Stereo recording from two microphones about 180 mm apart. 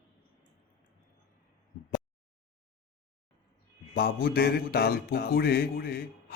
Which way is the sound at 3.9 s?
60° left (ahead or behind).